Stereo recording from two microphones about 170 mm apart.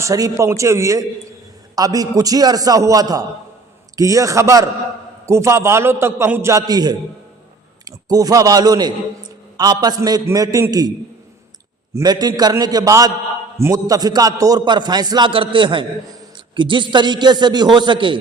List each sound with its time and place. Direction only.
0.0 s a man's voice: 20° right (ahead or behind)
11.9 s a man's voice: 25° right (ahead or behind)